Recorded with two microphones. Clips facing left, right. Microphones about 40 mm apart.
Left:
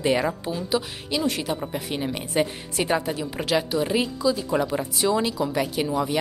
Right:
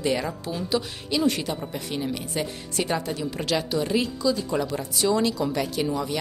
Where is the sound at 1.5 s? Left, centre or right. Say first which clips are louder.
Left 2 dB; centre.